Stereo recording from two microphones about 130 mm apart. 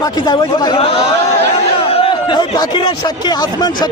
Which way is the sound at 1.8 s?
45° left (ahead or behind).